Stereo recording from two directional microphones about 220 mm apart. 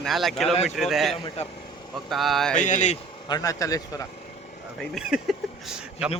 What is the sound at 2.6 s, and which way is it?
Speech, 35° left (ahead or behind).